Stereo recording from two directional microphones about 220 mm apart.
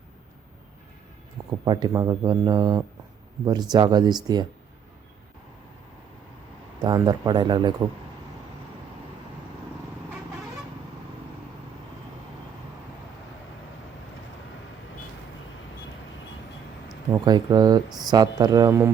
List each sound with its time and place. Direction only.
1.5 s speech: 20° right (ahead or behind)
6.8 s speech: 20° right (ahead or behind)
17.1 s speech: 20° right (ahead or behind)